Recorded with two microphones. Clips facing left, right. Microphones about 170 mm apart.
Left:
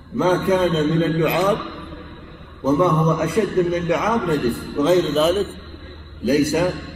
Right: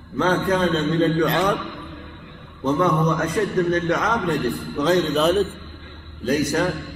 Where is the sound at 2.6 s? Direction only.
10° left (ahead or behind).